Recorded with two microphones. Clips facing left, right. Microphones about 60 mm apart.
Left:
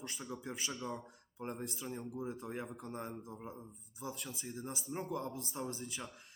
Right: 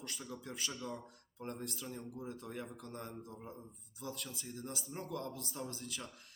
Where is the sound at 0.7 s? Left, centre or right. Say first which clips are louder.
Left 2 dB; centre.